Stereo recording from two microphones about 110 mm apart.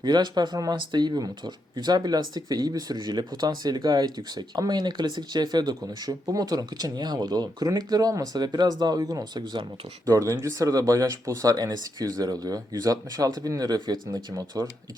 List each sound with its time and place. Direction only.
0.0 s speech: 40° right (ahead or behind)